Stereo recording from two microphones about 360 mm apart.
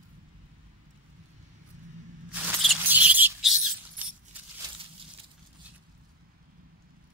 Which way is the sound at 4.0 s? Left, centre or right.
Centre.